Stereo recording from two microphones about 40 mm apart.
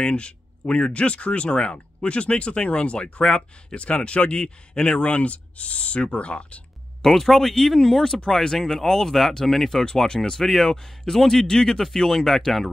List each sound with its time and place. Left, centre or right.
0.0 s speech: left
7.0 s speech: centre
10.0 s speech: centre